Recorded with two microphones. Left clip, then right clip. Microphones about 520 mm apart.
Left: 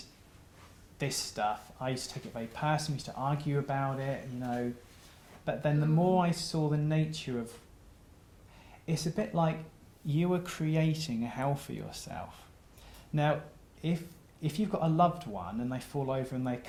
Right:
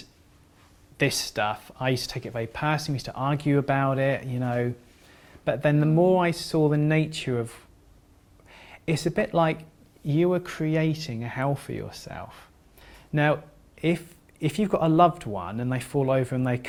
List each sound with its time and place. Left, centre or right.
0.9 s speech: right
5.5 s speech: right
8.5 s speech: right
12.8 s a sound: right
13.8 s speech: right